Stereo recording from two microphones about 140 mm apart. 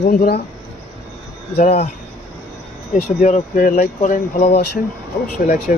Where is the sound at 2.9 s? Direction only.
50° left (ahead or behind).